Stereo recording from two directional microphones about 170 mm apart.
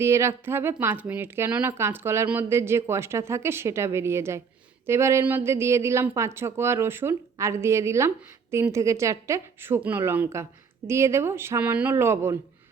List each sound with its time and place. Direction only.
0.0 s a woman's voice: 15° right (ahead or behind)